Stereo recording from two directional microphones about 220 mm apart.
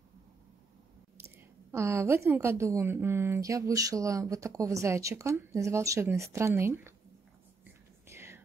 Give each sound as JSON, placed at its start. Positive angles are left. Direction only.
{"t": 1.7, "sound": "a woman's voice", "side_deg": -10}
{"t": 8.1, "sound": "whispering", "side_deg": -10}